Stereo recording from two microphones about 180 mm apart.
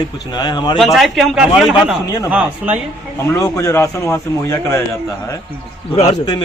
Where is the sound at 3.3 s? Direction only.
20° left (ahead or behind).